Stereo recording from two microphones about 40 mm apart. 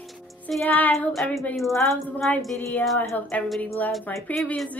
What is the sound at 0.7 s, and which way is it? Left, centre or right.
Speech, left.